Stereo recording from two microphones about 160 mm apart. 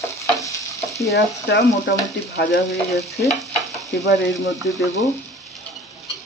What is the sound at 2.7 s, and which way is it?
Frying, centre (ahead or behind).